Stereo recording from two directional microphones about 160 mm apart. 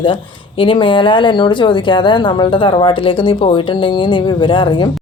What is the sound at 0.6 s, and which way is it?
Speech, 30° left (ahead or behind).